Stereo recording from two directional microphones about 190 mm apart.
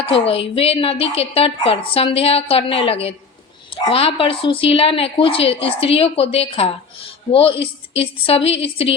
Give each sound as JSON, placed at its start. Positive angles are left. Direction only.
{"t": 0.0, "sound": "a woman's voice", "side_deg": 30}